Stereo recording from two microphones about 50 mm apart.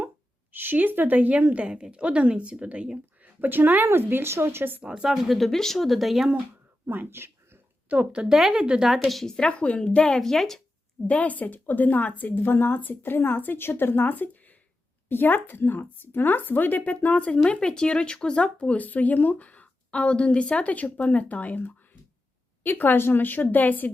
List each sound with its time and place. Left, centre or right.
0.5 s a woman's voice: right
3.4 s a woman's voice: right
3.8 s speech: right
4.8 s a woman's voice: centre
5.1 s speech: centre
6.8 s a sound: right
7.9 s a woman's voice: right
8.5 s a woman's voice: centre
8.9 s speech: centre
9.2 s speech: centre
11.0 s speech: left
18.8 s a woman's voice: left